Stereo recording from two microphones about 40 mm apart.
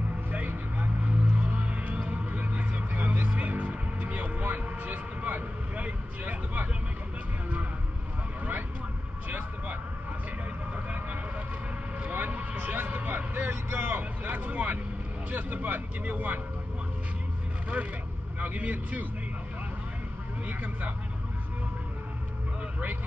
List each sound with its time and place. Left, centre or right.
0.3 s vehicle: right
2.4 s music: right
12.0 s a sound: right
12.5 s music: right
12.8 s vehicle: right
13.5 s vehicle: right
13.9 s vehicle: right
18.4 s speech: right
20.4 s vehicle: right